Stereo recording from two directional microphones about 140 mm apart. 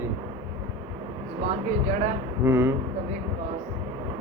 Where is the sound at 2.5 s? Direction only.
15° right (ahead or behind).